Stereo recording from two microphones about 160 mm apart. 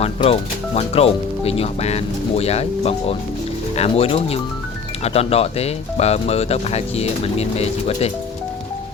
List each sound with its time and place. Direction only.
0.0 s speech: 40° left (ahead or behind)